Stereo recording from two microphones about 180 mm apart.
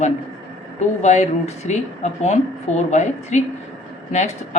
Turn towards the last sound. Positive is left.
turn(degrees=40)  # may be behind; listen again after turning